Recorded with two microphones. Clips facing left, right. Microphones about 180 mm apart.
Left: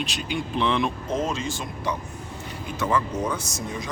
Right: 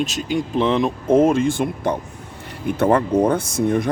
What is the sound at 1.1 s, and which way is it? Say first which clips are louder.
Speech: right 12 dB; 55° right (ahead or behind).